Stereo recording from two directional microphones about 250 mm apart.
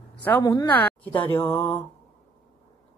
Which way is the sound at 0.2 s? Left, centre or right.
Centre.